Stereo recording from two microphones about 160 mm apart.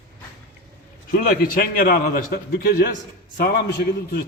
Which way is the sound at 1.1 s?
60° left (ahead or behind).